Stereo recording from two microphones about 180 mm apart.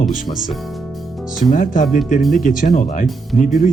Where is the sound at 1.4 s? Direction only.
45° left (ahead or behind).